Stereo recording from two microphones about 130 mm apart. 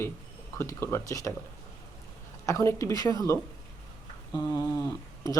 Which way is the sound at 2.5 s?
20° left (ahead or behind).